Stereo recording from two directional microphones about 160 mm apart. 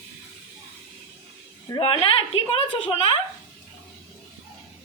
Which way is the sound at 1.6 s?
30° left (ahead or behind).